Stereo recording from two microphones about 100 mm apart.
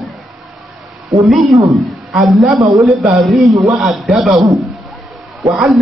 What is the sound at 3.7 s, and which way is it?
Speech, centre (ahead or behind).